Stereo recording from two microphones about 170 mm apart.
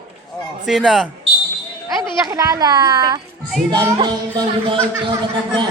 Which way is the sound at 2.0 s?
20° right (ahead or behind).